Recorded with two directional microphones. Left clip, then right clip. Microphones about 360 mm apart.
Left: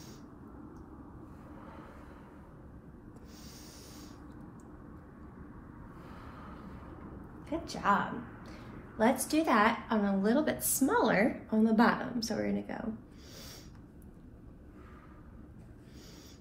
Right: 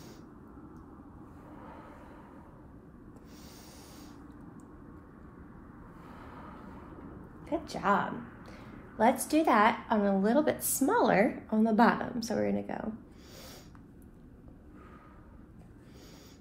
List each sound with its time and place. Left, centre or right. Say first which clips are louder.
7.4 s a woman's voice: right 1 dB; right